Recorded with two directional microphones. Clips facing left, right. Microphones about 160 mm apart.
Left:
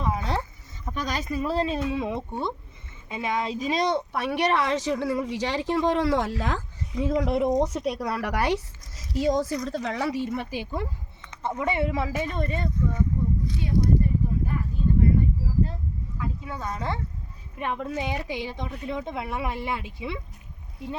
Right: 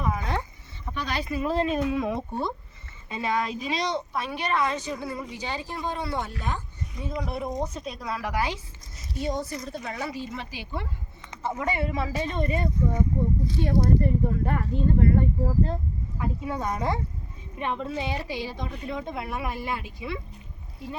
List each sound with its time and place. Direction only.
0.0 s a sound: 30° left (ahead or behind)
0.9 s speech: 40° left (ahead or behind); by 3.5 s 15° left (ahead or behind)
3.5 s a woman's voice: 40° left (ahead or behind)
11.6 s speech: 25° left (ahead or behind)
12.0 s speech: 10° left (ahead or behind)
12.4 s speech: 10° right (ahead or behind)
13.6 s speech: 65° right (ahead or behind)
16.1 s speech: 30° right (ahead or behind)
17.6 s speech: 5° left (ahead or behind); by 20.1 s 25° left (ahead or behind)